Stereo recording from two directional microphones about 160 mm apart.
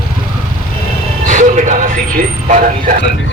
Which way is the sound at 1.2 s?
50° right (ahead or behind).